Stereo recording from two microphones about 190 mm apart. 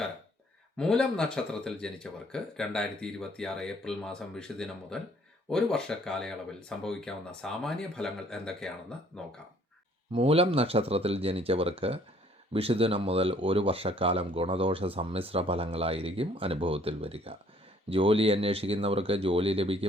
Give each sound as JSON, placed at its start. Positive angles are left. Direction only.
{"t": 0.8, "sound": "speech", "side_deg": 5}
{"t": 10.1, "sound": "speech", "side_deg": -30}